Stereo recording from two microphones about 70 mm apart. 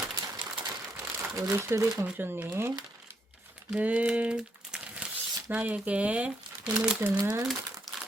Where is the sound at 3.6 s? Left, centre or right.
Centre.